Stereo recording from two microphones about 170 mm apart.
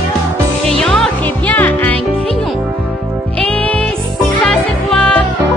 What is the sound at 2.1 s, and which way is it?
Music, 35° right (ahead or behind).